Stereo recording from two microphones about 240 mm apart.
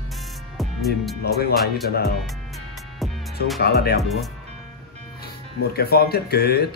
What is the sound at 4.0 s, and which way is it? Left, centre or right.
Speech, centre.